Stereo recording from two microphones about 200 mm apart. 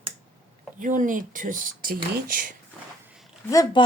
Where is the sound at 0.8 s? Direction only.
40° right (ahead or behind).